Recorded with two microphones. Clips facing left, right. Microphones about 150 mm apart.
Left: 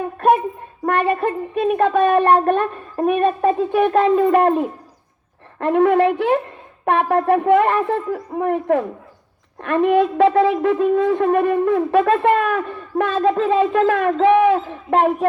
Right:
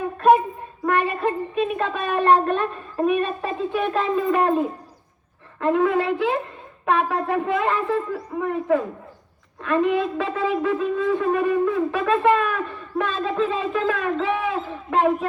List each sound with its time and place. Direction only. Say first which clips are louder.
0.9 s a sound: left 3 dB; 55° left (ahead or behind)
1.5 s a woman's voice: left 7 dB; 60° left (ahead or behind)
10.5 s a woman's voice: left 6 dB; 55° left (ahead or behind)